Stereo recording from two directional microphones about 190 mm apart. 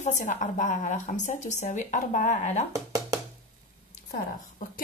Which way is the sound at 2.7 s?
20° right (ahead or behind).